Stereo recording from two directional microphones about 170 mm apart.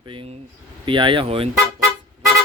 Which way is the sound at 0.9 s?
30° right (ahead or behind).